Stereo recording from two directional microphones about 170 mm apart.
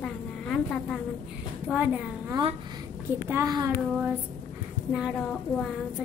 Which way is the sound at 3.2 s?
20° right (ahead or behind).